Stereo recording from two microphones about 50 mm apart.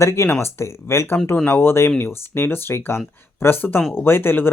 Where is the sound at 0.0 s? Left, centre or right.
Left.